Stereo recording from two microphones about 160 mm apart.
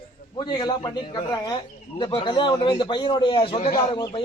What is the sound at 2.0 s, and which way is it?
A man's voice, 25° left (ahead or behind).